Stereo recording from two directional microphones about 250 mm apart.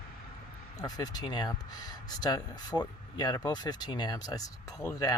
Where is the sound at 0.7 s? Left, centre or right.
Centre.